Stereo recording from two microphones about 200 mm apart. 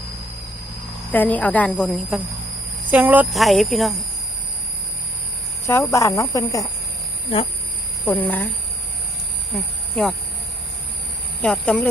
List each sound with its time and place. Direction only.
1.1 s speech: 10° left (ahead or behind)
5.6 s speech: 15° left (ahead or behind)
8.0 s speech: 10° left (ahead or behind)
9.9 s speech: 5° left (ahead or behind)
11.4 s speech: 5° left (ahead or behind)